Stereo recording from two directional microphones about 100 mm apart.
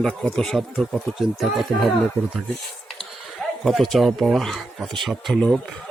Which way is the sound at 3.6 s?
Centre (ahead or behind).